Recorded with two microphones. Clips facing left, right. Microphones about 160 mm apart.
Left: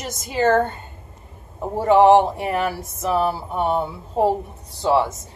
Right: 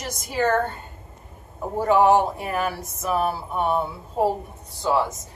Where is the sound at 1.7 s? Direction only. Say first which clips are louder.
Left 4 dB; 25° left (ahead or behind).